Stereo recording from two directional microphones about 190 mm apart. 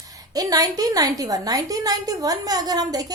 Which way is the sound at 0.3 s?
20° right (ahead or behind).